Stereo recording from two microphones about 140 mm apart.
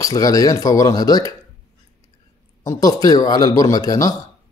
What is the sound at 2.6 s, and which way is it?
Speech, 25° left (ahead or behind).